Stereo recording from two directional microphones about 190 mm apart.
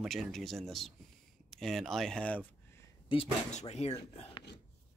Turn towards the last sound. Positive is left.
turn(degrees=35)  # may be behind; listen again after turning